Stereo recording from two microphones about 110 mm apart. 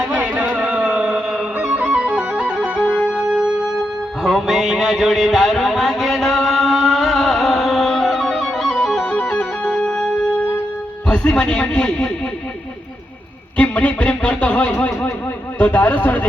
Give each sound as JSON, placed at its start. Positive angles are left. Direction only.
{"t": 0.1, "sound": "music", "side_deg": -15}
{"t": 11.1, "sound": "speech", "side_deg": 10}
{"t": 13.6, "sound": "speech", "side_deg": 15}